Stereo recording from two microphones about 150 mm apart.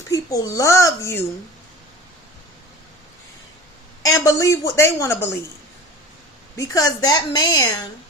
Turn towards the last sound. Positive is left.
turn(degrees=25)  # may be behind; listen again after turning